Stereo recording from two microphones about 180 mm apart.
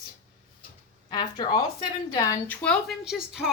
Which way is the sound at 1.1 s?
25° left (ahead or behind).